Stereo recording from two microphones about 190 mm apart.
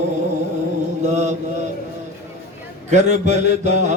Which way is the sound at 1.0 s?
40° right (ahead or behind).